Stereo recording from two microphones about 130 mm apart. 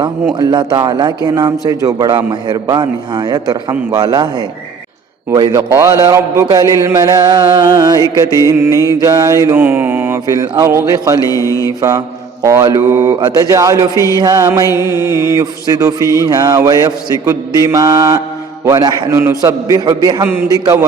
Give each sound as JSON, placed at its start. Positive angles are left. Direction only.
{"t": 0.3, "sound": "a man's voice", "side_deg": -35}
{"t": 5.7, "sound": "mantra", "side_deg": -30}
{"t": 11.3, "sound": "mantra", "side_deg": 25}
{"t": 11.8, "sound": "mantra", "side_deg": -25}
{"t": 13.9, "sound": "mantra", "side_deg": 25}
{"t": 14.2, "sound": "a man's voice", "side_deg": -30}
{"t": 14.8, "sound": "mantra", "side_deg": -20}